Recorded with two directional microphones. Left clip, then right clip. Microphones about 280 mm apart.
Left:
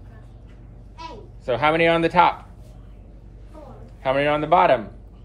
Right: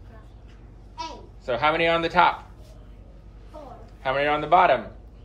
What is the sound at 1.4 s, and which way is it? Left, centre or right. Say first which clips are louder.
Speech: left 3 dB; left.